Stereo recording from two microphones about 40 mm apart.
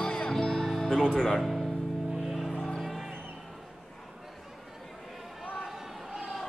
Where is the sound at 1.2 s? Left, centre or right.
Centre.